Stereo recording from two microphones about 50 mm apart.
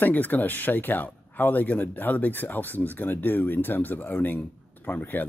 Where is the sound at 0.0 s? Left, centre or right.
Left.